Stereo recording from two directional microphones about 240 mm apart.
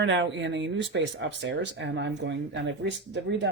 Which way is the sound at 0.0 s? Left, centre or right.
Right.